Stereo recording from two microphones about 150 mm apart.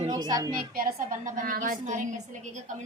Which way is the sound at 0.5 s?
75° right (ahead or behind).